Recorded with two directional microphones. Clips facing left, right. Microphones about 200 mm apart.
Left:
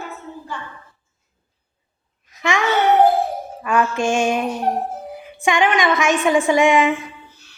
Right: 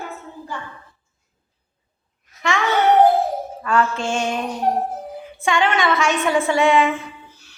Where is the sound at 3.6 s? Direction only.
15° left (ahead or behind).